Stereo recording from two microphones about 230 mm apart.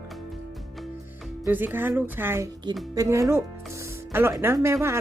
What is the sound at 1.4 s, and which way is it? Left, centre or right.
Speech, centre.